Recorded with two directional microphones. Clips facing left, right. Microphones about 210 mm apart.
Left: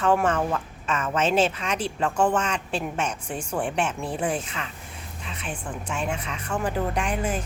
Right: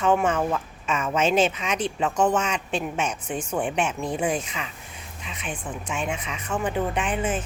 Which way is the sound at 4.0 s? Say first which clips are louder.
Right 2 dB; 5° left (ahead or behind).